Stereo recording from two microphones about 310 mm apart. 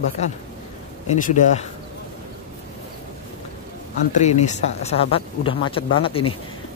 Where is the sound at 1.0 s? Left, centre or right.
Left.